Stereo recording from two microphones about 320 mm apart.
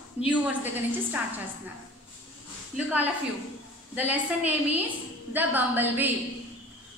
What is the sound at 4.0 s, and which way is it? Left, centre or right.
A woman's voice, centre.